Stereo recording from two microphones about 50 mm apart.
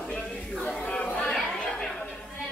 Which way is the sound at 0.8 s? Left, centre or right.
Left.